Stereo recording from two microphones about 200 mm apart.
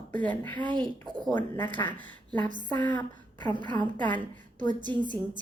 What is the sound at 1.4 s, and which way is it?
Speech, 10° left (ahead or behind).